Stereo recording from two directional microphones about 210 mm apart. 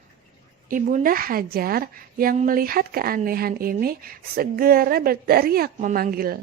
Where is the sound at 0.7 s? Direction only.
40° right (ahead or behind).